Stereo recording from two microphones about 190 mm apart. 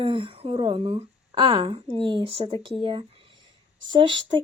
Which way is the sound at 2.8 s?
30° right (ahead or behind).